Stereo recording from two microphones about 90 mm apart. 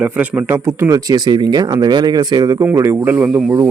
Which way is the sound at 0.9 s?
40° right (ahead or behind).